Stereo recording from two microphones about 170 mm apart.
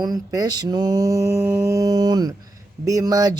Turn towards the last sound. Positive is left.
turn(degrees=-20)  # may be behind; listen again after turning